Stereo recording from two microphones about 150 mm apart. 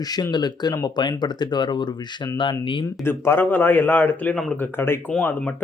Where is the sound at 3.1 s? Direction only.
15° left (ahead or behind).